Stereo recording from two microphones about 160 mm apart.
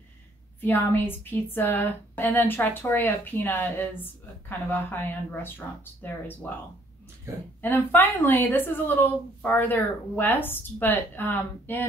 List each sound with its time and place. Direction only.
0.6 s a woman's voice: 10° left (ahead or behind)
7.6 s a woman's voice: 10° left (ahead or behind)